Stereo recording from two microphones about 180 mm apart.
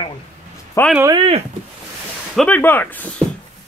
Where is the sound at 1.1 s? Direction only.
35° right (ahead or behind).